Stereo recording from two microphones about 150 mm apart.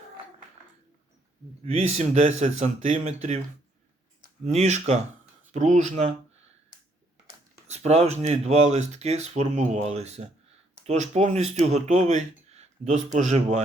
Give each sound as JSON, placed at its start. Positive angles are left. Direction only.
{"t": 1.6, "sound": "speech", "side_deg": -45}
{"t": 4.4, "sound": "speech", "side_deg": -50}
{"t": 7.7, "sound": "speech", "side_deg": -45}